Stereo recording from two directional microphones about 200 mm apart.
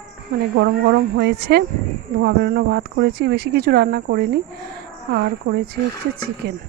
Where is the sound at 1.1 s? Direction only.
55° right (ahead or behind).